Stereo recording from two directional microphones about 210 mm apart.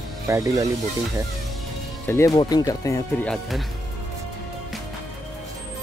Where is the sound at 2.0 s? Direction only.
15° left (ahead or behind).